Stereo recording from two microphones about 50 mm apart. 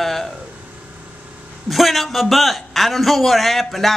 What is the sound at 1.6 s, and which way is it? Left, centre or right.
A man's voice, centre.